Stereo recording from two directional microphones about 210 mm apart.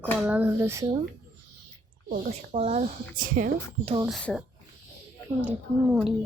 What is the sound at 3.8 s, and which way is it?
Speech, 25° right (ahead or behind).